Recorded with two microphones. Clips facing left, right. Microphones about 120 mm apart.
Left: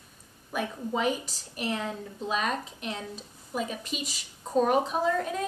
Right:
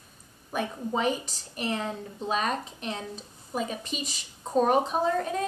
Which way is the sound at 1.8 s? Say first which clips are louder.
Right 1 dB; 30° right (ahead or behind).